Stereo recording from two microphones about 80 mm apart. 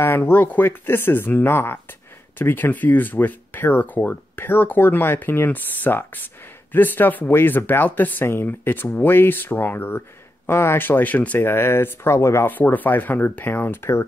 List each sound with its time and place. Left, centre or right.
0.0 s speech: left
12.4 s speech: left